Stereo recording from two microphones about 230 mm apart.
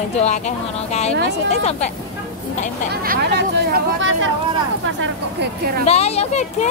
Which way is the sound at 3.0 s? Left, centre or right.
Right.